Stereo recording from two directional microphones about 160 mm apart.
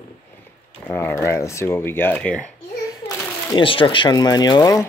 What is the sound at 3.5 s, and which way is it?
Speech, 30° left (ahead or behind).